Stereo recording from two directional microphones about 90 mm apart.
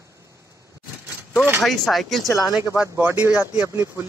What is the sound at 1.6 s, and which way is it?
Speech, centre (ahead or behind).